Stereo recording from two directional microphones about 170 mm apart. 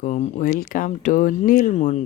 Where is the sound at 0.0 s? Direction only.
45° left (ahead or behind).